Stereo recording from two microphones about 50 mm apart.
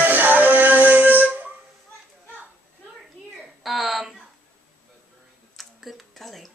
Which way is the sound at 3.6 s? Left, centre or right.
Centre.